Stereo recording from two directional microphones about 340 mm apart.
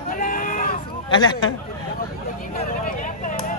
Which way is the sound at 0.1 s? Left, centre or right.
Left.